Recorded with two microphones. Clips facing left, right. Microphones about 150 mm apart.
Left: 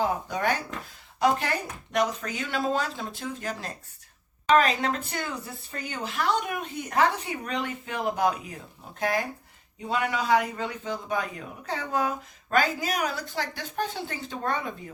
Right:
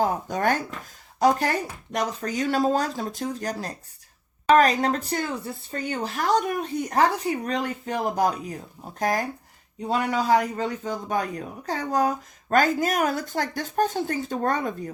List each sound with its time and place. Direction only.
0.0 s a man's voice: 45° right (ahead or behind)